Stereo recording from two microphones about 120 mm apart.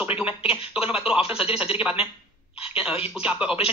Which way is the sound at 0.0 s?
15° right (ahead or behind).